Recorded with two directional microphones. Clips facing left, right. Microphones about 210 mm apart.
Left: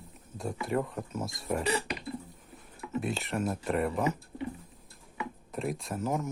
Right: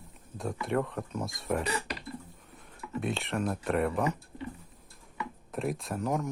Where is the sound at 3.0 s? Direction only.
Centre (ahead or behind).